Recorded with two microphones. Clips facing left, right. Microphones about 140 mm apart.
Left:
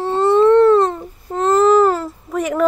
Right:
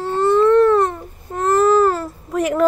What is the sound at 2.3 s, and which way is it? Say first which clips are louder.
Speech: right 1 dB; centre (ahead or behind).